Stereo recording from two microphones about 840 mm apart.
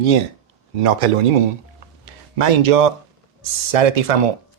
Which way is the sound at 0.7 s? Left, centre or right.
Right.